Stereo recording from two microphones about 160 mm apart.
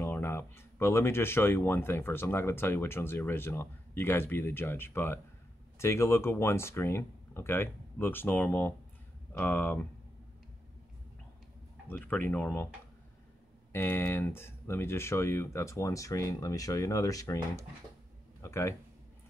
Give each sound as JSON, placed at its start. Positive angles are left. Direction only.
{"t": 0.0, "sound": "speech", "side_deg": 15}
{"t": 11.9, "sound": "speech", "side_deg": 10}
{"t": 13.7, "sound": "speech", "side_deg": 15}
{"t": 18.4, "sound": "speech", "side_deg": 15}